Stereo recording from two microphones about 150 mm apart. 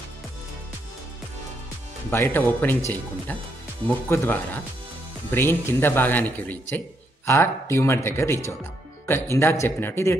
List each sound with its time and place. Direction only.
2.0 s speech: 15° left (ahead or behind)
3.8 s speech: 15° left (ahead or behind)